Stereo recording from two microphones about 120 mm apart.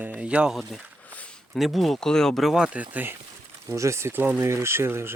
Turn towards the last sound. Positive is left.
turn(degrees=-20)  # may be behind; listen again after turning